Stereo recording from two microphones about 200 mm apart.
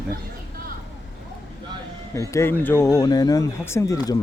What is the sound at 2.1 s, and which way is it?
Speech, 15° left (ahead or behind).